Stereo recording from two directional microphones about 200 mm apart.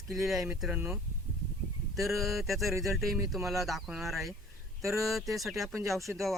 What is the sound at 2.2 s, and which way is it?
Speech, centre (ahead or behind).